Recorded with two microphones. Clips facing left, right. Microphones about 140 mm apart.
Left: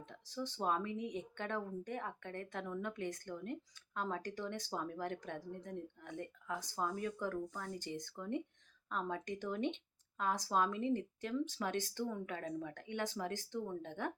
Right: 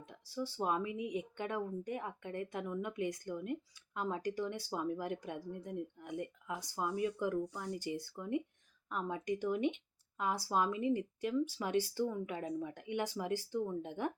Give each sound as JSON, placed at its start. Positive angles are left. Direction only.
{"t": 0.0, "sound": "speech", "side_deg": -10}